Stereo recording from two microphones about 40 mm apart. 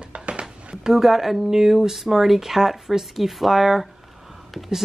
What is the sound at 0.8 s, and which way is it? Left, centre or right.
Speech, centre.